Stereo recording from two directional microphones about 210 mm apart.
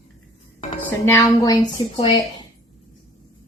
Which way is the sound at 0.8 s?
10° left (ahead or behind).